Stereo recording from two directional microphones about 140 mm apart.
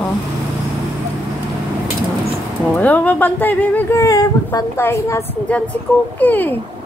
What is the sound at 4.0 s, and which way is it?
A woman's voice, 25° left (ahead or behind).